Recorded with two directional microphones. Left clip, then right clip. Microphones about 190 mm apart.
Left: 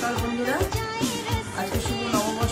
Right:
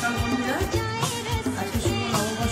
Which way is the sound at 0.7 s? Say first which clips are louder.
Right 1 dB; 20° right (ahead or behind).